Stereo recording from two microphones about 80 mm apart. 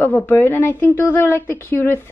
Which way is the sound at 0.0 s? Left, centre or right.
Left.